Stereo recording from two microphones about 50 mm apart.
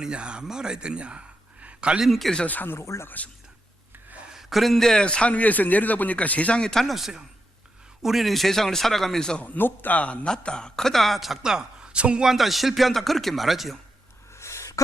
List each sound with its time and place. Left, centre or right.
0.0 s speech: centre
1.6 s a sound: right
2.0 s speech: centre
2.5 s a man's voice: left
2.7 s speech: left
4.3 s a man's voice: centre
5.0 s a man's voice: left
6.6 s speech: centre
6.8 s speech: centre
9.4 s a man's voice: left
10.2 s speech: centre
11.4 s a woman's voice: centre
12.2 s speech: centre
14.3 s a sound: left